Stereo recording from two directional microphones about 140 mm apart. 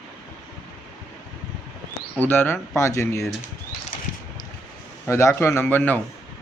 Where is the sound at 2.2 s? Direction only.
15° left (ahead or behind).